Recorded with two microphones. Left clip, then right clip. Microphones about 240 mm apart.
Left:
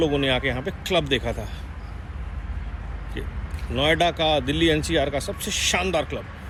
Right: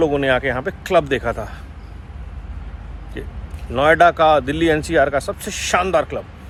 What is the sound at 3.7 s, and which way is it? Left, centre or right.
Speech, right.